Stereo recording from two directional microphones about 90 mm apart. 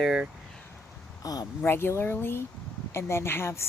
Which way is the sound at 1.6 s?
25° left (ahead or behind).